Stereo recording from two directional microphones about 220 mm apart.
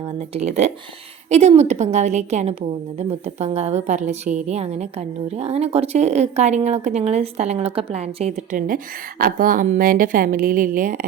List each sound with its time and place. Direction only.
0.3 s a woman's voice: 30° right (ahead or behind)